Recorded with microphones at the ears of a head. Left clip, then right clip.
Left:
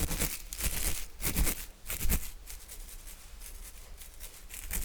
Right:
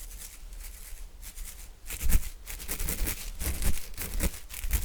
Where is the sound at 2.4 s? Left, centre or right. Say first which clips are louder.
Right 11 dB; right.